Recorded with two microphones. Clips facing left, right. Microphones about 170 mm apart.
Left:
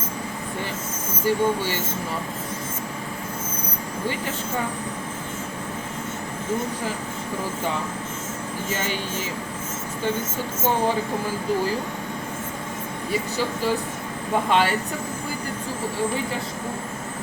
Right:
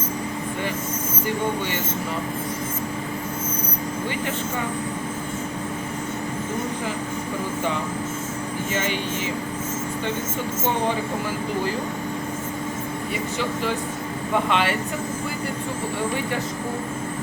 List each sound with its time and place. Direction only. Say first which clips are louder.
14.5 s speech: left 4 dB; 40° left (ahead or behind)